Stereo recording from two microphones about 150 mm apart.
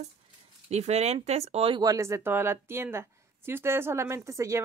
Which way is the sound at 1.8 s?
20° right (ahead or behind).